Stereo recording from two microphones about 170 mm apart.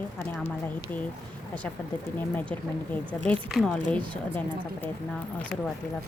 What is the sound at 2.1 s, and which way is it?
Speech, 10° left (ahead or behind).